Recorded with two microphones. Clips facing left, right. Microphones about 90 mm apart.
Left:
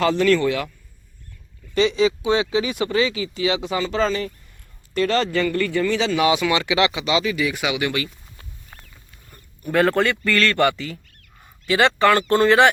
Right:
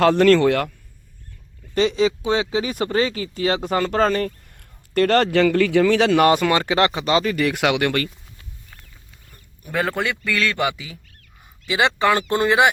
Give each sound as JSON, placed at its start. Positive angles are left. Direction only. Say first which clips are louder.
{"t": 0.0, "sound": "speech", "louder": "right 4 dB", "side_deg": -65}
{"t": 1.7, "sound": "speech", "louder": "even", "side_deg": -45}
{"t": 9.6, "sound": "a man's voice", "louder": "left 5 dB", "side_deg": 0}